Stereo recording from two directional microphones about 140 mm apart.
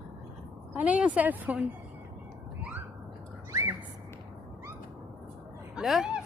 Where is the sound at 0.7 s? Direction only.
10° right (ahead or behind).